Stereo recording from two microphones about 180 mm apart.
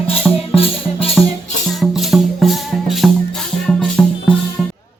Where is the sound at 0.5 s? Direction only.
30° left (ahead or behind).